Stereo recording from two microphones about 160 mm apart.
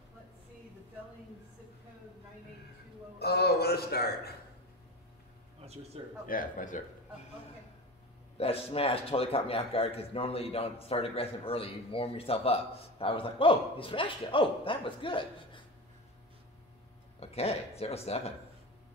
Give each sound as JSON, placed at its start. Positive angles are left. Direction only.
{"t": 3.2, "sound": "a man's voice", "side_deg": 80}
{"t": 6.2, "sound": "speech", "side_deg": 60}
{"t": 8.4, "sound": "a man's voice", "side_deg": 40}
{"t": 17.2, "sound": "a man's voice", "side_deg": 40}